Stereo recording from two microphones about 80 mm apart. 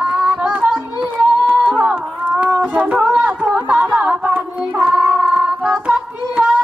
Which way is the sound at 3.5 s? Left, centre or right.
Centre.